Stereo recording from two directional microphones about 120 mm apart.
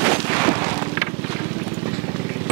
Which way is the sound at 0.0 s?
20° right (ahead or behind).